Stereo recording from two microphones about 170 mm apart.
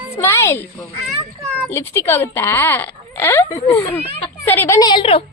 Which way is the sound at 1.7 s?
15° left (ahead or behind).